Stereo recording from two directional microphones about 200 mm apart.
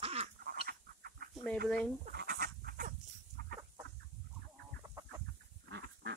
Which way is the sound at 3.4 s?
50° right (ahead or behind).